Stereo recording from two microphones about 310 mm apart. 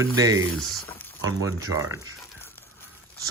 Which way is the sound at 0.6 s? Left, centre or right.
Centre.